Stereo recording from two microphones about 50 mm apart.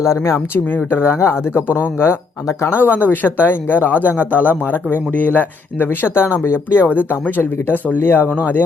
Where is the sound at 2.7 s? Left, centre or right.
Left.